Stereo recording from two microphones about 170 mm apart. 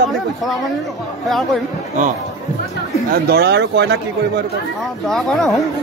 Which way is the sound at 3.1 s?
70° right (ahead or behind).